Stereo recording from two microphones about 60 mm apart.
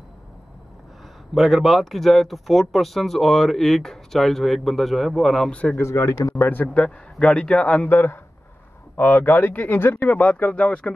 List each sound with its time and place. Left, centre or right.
1.3 s speech: centre
5.5 s speech: left
5.8 s speech: left
6.5 s speech: left
6.8 s speech: centre